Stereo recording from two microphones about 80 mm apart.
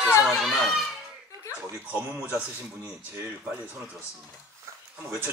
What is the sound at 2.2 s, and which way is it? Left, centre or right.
Speech, right.